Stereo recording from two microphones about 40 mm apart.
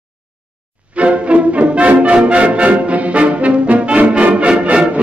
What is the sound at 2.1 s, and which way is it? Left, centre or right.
Brass instrument, right.